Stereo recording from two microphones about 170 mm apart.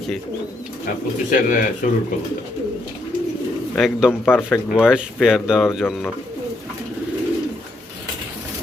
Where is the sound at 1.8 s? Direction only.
50° left (ahead or behind).